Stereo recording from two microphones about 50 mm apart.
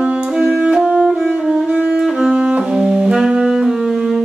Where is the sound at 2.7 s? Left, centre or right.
Centre.